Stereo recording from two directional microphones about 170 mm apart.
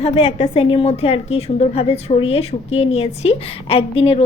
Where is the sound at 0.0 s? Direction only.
30° left (ahead or behind).